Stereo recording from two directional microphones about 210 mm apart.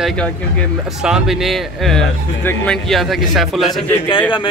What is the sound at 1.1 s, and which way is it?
A man's voice, 5° right (ahead or behind).